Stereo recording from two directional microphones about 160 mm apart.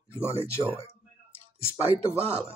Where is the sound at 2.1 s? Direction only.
15° left (ahead or behind).